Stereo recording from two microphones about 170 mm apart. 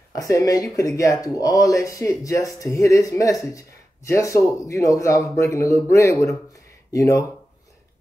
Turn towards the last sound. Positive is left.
turn(degrees=20)  # may be behind; listen again after turning